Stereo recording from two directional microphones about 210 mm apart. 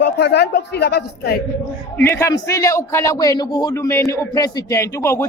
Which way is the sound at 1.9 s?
10° left (ahead or behind).